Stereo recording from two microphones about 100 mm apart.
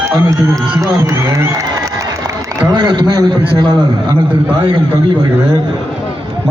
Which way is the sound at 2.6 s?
50° right (ahead or behind).